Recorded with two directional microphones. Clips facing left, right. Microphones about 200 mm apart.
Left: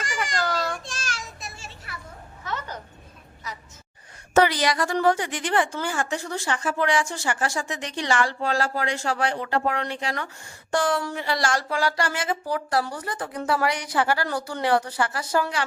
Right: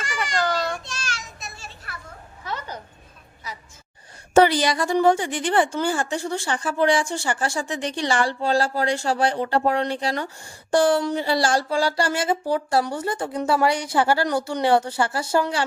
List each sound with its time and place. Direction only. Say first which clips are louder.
0.9 s child singing: right 1 dB; 50° left (ahead or behind)
2.5 s a sound: right 1 dB; 10° right (ahead or behind)
4.4 s a woman's voice: right 3 dB; 30° right (ahead or behind)